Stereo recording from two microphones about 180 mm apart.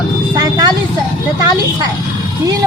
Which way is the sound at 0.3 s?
20° right (ahead or behind).